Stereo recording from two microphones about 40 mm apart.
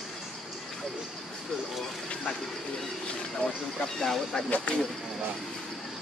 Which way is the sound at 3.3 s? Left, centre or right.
Centre.